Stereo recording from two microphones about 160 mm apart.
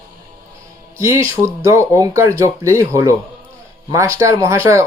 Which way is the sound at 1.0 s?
15° right (ahead or behind).